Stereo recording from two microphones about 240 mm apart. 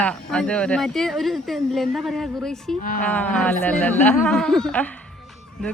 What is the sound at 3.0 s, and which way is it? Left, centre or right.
Speech, centre.